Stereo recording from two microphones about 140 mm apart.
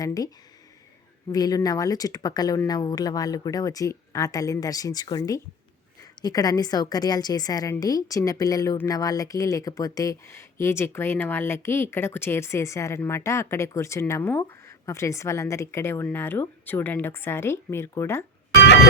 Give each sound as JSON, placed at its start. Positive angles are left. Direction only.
{"t": 0.0, "sound": "speech", "side_deg": 25}
{"t": 1.3, "sound": "speech", "side_deg": 25}